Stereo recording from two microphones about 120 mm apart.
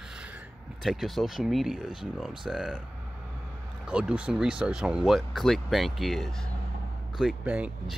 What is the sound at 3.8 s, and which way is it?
Speech, 10° right (ahead or behind).